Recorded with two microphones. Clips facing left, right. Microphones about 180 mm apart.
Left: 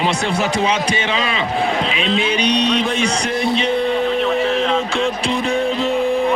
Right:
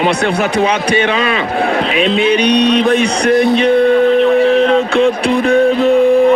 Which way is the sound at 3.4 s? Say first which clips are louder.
Right 7 dB; 60° right (ahead or behind).